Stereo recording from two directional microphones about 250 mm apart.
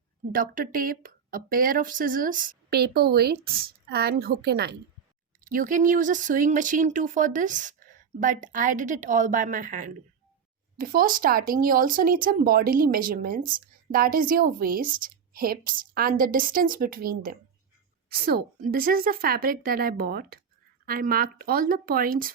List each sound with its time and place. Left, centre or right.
0.3 s speech: right